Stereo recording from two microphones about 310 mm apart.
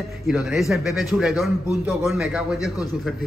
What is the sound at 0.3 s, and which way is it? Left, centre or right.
A man's voice, centre.